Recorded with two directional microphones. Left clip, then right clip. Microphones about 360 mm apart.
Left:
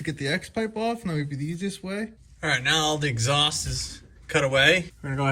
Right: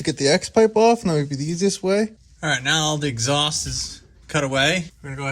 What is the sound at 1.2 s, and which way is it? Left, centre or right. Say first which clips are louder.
Speech: right 6 dB; right.